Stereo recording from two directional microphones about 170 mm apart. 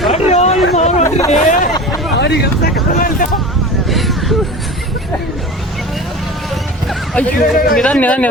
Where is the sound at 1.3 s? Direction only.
50° left (ahead or behind).